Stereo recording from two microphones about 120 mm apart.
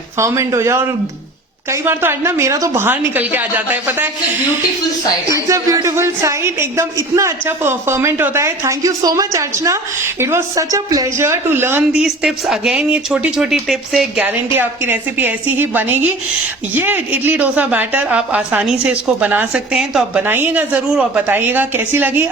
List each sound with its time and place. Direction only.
0.2 s speech: 25° right (ahead or behind)
5.3 s speech: 25° right (ahead or behind)
11.9 s speech: 5° right (ahead or behind)
14.2 s speech: 15° right (ahead or behind)
20.2 s speech: 15° right (ahead or behind)